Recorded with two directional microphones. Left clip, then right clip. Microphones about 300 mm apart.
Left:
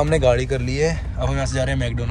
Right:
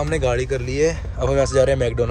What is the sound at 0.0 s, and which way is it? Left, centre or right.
Speech, centre.